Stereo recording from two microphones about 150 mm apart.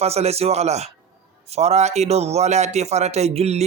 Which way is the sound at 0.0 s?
45° right (ahead or behind).